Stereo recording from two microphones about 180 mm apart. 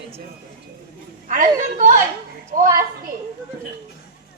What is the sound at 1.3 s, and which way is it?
Speech, 45° right (ahead or behind).